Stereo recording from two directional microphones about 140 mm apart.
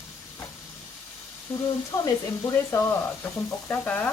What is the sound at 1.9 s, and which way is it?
Speech, 25° left (ahead or behind).